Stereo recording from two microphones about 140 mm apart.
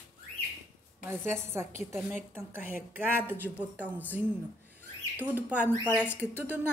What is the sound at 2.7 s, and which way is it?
Speech, 15° right (ahead or behind).